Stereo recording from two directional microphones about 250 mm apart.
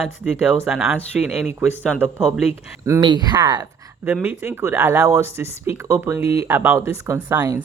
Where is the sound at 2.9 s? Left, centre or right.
Centre.